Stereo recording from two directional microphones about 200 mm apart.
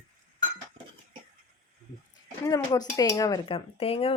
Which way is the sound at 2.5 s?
20° left (ahead or behind).